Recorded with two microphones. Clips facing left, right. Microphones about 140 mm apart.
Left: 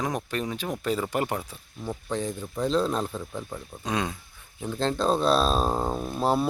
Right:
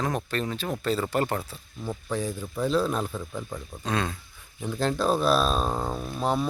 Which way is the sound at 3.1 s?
10° left (ahead or behind).